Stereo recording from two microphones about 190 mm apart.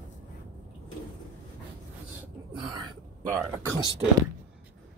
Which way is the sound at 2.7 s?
20° right (ahead or behind).